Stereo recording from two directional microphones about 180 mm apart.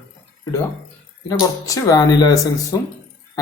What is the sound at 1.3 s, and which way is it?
Speech, 20° left (ahead or behind).